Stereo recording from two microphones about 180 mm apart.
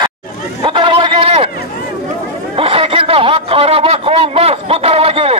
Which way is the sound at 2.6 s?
30° right (ahead or behind).